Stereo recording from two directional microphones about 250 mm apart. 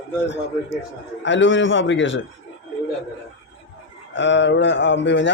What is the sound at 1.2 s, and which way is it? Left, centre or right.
Speech, left.